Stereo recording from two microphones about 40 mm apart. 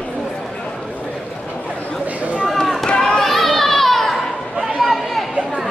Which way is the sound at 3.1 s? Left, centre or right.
Centre.